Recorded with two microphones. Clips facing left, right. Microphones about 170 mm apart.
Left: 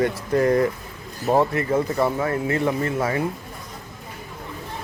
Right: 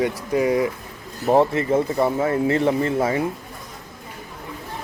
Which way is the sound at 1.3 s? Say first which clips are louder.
Right 2 dB; 25° right (ahead or behind).